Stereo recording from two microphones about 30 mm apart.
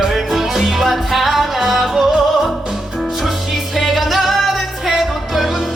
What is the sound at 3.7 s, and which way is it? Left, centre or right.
Music, centre.